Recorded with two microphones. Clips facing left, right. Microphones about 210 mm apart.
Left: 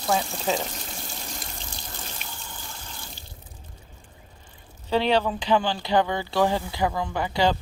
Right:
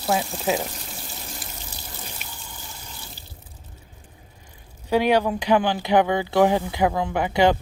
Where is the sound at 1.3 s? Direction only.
10° right (ahead or behind).